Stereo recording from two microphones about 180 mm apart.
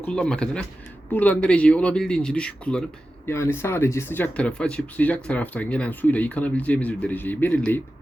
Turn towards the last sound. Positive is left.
turn(degrees=10)  # may be behind; listen again after turning